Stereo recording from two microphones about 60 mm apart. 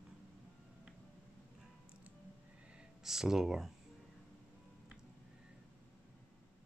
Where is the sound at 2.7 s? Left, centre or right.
Centre.